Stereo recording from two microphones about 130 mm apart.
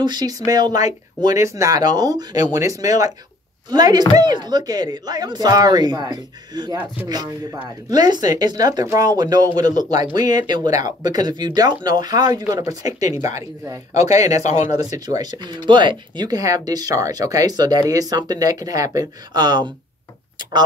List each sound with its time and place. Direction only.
0.0 s speech: 35° right (ahead or behind)
8.0 s speech: 30° right (ahead or behind)
14.4 s speech: 60° left (ahead or behind)
14.9 s speech: 30° right (ahead or behind)